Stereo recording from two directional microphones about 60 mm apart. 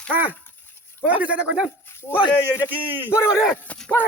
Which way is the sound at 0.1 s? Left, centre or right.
Right.